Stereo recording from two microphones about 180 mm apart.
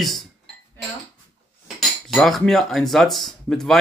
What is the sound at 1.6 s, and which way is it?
Cutlery, centre (ahead or behind).